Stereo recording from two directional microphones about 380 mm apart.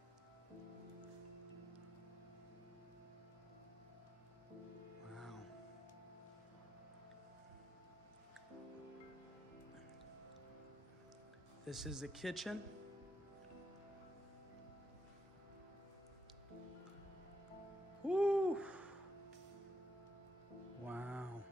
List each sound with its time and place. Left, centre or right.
5.1 s music: centre
11.6 s speech: centre
18.0 s hoot: centre
20.8 s music: centre